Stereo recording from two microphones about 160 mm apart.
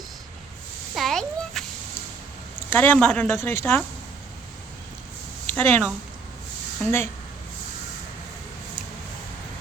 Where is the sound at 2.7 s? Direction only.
10° left (ahead or behind).